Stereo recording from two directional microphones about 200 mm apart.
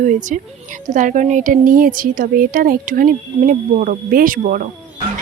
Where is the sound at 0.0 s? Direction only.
40° right (ahead or behind).